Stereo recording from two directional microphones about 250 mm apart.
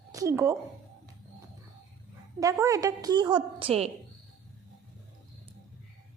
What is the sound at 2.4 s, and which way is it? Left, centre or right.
Speech, centre.